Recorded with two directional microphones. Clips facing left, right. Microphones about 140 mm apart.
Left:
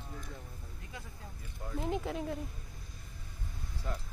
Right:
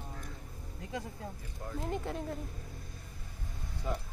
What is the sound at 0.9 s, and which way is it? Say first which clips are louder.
Speech: right 10 dB; 40° right (ahead or behind).